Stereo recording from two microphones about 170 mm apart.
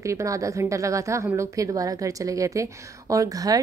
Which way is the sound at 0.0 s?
20° right (ahead or behind).